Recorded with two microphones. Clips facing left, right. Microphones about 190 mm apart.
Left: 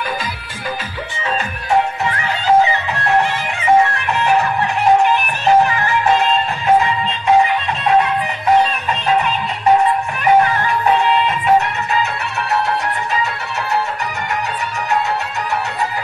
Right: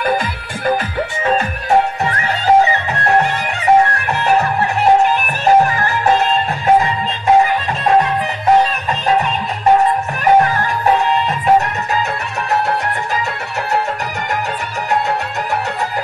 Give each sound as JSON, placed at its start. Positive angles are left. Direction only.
{"t": 1.2, "sound": "music", "side_deg": -45}
{"t": 5.4, "sound": "music", "side_deg": -40}
{"t": 11.2, "sound": "music", "side_deg": -40}